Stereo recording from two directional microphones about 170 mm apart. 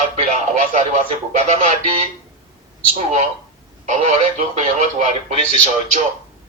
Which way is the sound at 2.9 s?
45° right (ahead or behind).